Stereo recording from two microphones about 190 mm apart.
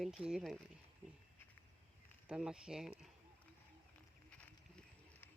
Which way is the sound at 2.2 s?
5° right (ahead or behind).